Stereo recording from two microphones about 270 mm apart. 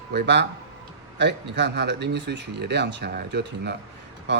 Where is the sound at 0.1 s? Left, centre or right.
Right.